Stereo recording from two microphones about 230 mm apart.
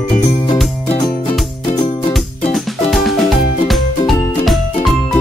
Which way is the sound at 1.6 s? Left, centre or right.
Centre.